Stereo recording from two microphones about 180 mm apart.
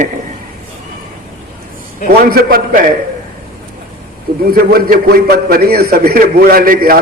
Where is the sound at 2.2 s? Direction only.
55° right (ahead or behind).